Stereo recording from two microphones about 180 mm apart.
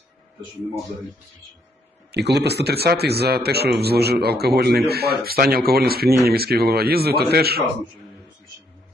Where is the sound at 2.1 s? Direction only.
65° right (ahead or behind).